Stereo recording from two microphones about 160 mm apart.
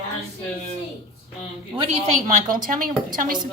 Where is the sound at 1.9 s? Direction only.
55° right (ahead or behind).